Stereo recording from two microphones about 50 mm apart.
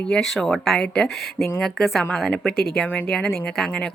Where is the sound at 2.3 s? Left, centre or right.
Centre.